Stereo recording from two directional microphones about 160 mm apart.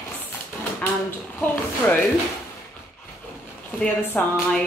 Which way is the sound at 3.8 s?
10° left (ahead or behind).